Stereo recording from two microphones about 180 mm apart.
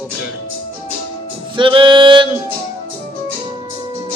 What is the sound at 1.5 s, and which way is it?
Music, 30° right (ahead or behind).